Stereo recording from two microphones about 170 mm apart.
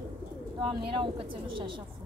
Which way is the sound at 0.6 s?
30° right (ahead or behind).